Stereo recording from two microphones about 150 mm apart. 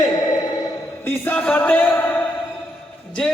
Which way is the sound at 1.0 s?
10° left (ahead or behind).